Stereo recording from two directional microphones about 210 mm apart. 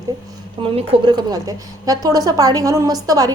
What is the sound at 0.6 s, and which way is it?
A woman's voice, 25° right (ahead or behind).